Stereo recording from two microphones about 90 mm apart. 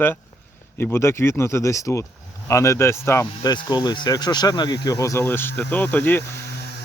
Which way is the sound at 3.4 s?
50° left (ahead or behind).